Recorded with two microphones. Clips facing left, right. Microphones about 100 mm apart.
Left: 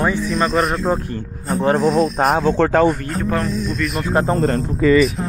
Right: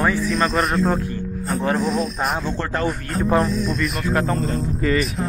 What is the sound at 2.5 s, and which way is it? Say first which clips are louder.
Speech: left 10 dB; 90° left.